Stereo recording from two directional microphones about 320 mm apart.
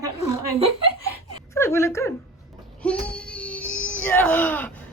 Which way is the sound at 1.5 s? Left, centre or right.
Centre.